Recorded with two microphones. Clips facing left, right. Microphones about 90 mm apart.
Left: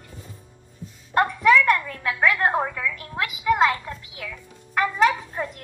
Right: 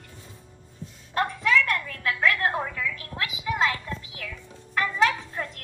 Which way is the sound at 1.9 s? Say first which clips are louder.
Left 2 dB; 15° left (ahead or behind).